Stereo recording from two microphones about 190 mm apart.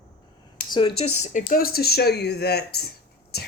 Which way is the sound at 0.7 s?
25° left (ahead or behind).